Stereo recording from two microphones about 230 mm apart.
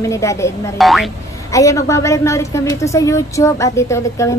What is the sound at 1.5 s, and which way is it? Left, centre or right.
A woman's voice, centre.